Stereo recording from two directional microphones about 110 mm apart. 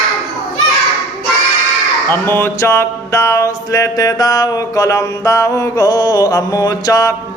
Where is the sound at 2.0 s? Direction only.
20° left (ahead or behind).